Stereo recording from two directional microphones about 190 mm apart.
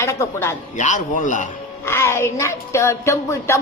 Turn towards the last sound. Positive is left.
turn(degrees=15)  # may be behind; listen again after turning